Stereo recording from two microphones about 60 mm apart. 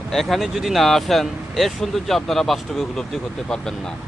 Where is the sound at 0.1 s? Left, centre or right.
Centre.